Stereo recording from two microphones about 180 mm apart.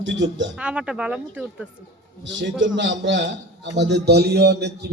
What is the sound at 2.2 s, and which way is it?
A man's voice, 90° right.